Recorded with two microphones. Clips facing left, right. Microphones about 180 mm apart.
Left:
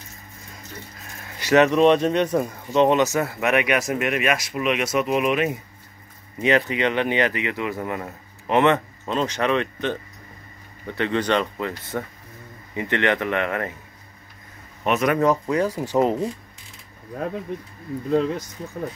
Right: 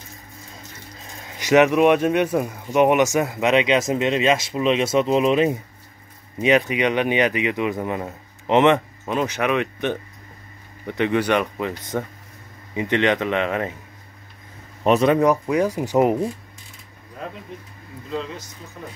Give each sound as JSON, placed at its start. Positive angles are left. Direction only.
{"t": 1.0, "sound": "speech", "side_deg": -15}
{"t": 6.4, "sound": "speech", "side_deg": -15}
{"t": 14.8, "sound": "speech", "side_deg": -30}
{"t": 15.1, "sound": "speech", "side_deg": -15}
{"t": 18.1, "sound": "speech", "side_deg": 50}